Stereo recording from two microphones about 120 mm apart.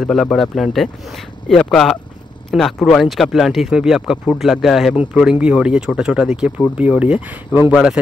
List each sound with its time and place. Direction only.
0.0 s speech: 5° left (ahead or behind)